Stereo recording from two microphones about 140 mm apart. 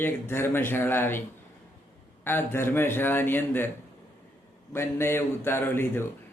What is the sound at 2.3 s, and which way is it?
A man's voice, 15° left (ahead or behind).